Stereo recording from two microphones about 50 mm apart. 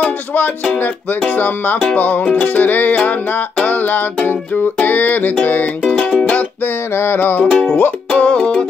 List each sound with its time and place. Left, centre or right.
1.3 s music: left
7.0 s music: left
7.4 s music: left
8.4 s music: centre